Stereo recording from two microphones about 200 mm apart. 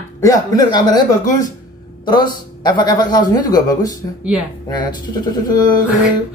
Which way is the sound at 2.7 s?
20° left (ahead or behind).